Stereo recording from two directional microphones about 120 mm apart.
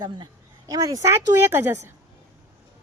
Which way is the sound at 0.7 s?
30° right (ahead or behind).